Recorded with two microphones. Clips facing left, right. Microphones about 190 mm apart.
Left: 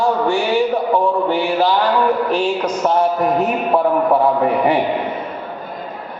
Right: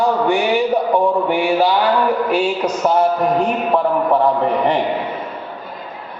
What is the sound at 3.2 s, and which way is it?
A man's voice, 5° left (ahead or behind).